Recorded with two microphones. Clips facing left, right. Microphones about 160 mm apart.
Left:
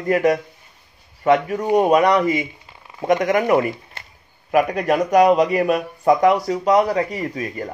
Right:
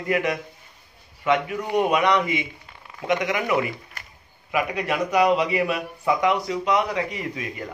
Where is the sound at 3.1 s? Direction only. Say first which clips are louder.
Left 6 dB; 45° left (ahead or behind).